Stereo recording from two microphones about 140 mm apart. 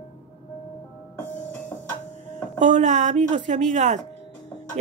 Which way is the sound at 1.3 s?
15° left (ahead or behind).